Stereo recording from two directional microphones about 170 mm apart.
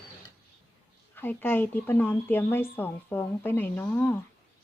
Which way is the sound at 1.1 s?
10° left (ahead or behind).